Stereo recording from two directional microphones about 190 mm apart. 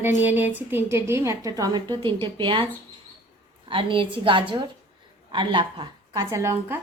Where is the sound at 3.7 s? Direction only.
25° right (ahead or behind).